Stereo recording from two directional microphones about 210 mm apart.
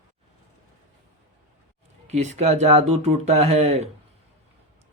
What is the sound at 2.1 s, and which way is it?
A man's voice, 35° right (ahead or behind).